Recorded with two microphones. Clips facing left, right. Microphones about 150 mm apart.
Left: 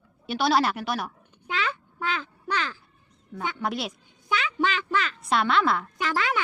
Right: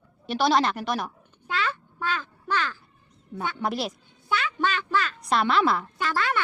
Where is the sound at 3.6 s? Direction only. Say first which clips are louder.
Right 2 dB; centre (ahead or behind).